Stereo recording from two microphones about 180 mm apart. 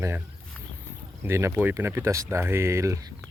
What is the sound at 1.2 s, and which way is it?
Speech, 15° right (ahead or behind).